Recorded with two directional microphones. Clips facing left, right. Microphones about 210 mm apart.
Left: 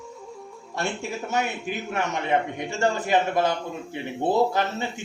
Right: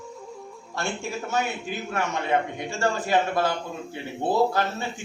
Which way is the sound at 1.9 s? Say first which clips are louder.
Even; 20° left (ahead or behind).